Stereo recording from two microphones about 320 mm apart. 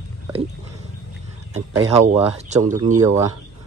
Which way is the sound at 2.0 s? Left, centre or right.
Right.